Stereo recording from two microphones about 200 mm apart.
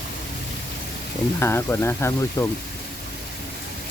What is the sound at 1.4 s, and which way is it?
Speech, 10° left (ahead or behind).